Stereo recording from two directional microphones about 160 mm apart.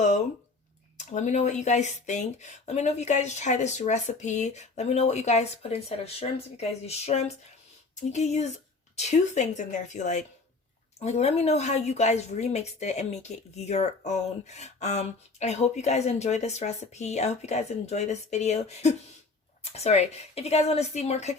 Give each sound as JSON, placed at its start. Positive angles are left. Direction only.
{"t": 0.9, "sound": "speech", "side_deg": 50}